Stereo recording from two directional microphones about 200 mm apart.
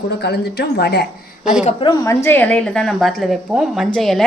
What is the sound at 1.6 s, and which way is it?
A woman's voice, 25° left (ahead or behind).